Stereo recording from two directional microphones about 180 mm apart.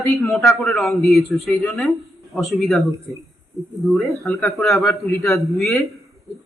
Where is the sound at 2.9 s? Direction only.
15° right (ahead or behind).